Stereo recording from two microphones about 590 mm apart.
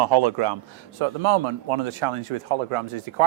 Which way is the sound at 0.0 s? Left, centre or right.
Right.